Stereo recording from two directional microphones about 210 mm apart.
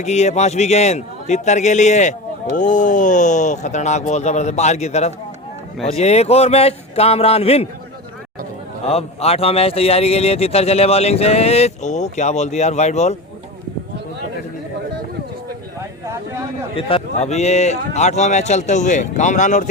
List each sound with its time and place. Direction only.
0.0 s a man's voice: 30° left (ahead or behind)
8.9 s a man's voice: 30° left (ahead or behind)
15.8 s a sound: 15° right (ahead or behind)
16.7 s speech: 30° left (ahead or behind)